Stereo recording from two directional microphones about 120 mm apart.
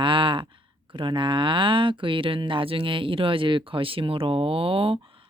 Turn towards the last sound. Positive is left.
turn(degrees=-50)  # may be behind; listen again after turning